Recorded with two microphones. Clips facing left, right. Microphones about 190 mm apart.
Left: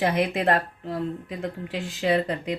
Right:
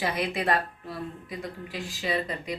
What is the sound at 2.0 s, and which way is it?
Speech, 75° left (ahead or behind).